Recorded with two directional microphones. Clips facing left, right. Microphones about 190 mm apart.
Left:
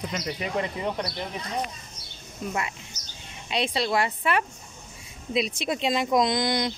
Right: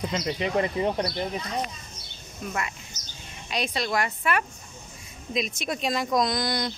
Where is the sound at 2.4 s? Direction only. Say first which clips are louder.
Left 1 dB; 25° left (ahead or behind).